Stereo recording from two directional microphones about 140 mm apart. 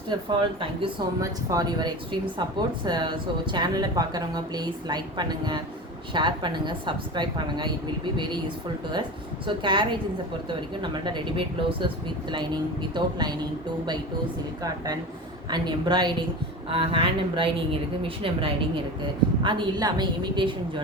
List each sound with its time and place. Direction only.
0.1 s speech: 35° right (ahead or behind)
1.2 s speech: 25° right (ahead or behind)
12.9 s speech: 30° right (ahead or behind)
15.4 s speech: 30° right (ahead or behind)